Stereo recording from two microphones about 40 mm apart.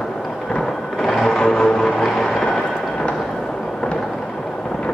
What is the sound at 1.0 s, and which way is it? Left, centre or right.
Music, centre.